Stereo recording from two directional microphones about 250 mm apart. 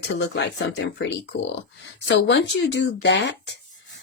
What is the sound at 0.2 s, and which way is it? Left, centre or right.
Speech, left.